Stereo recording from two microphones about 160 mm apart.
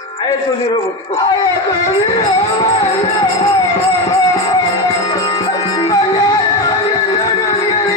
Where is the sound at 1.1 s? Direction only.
25° left (ahead or behind).